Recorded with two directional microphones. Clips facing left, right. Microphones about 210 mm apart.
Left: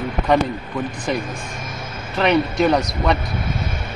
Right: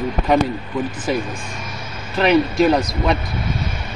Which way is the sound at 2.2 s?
5° right (ahead or behind).